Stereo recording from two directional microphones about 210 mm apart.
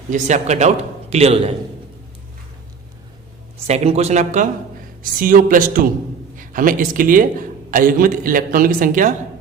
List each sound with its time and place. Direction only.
0.1 s a man's voice: 35° right (ahead or behind)
3.7 s a man's voice: 30° right (ahead or behind)